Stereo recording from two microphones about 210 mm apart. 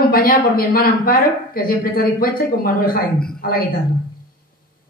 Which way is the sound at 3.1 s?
5° left (ahead or behind).